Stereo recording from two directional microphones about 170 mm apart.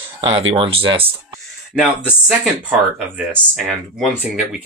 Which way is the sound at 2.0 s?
5° right (ahead or behind).